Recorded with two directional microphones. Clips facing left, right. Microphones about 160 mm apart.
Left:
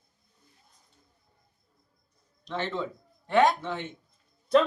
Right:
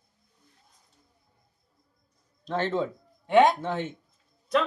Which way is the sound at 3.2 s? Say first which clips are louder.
Right 3 dB; 20° right (ahead or behind).